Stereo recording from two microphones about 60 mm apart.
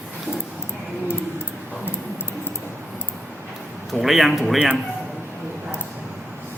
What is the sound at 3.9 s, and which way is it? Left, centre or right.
Speech, centre.